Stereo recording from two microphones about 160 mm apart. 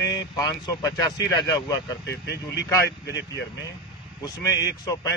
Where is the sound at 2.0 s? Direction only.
90° left.